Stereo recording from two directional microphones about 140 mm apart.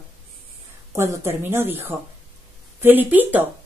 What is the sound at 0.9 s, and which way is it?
A woman's voice, 20° right (ahead or behind).